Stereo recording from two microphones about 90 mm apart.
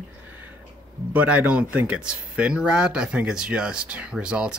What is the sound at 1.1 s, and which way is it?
Speech, 15° right (ahead or behind).